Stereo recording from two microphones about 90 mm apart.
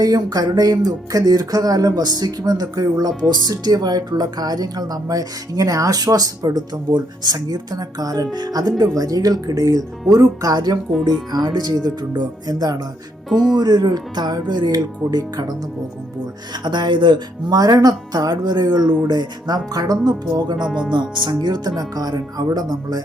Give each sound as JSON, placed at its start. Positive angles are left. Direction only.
{"t": 0.0, "sound": "speech", "side_deg": -45}
{"t": 13.3, "sound": "speech", "side_deg": -5}
{"t": 13.6, "sound": "speech", "side_deg": -50}
{"t": 16.6, "sound": "speech", "side_deg": -60}
{"t": 17.5, "sound": "speech", "side_deg": -45}
{"t": 20.7, "sound": "speech", "side_deg": -10}
{"t": 20.9, "sound": "speech", "side_deg": -55}